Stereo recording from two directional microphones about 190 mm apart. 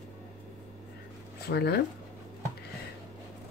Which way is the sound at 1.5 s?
60° left (ahead or behind).